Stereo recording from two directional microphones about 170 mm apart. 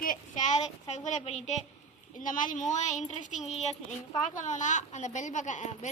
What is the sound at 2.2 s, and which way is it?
Speech, 50° left (ahead or behind).